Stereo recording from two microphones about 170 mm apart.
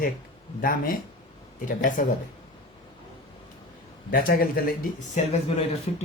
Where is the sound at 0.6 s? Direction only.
55° left (ahead or behind).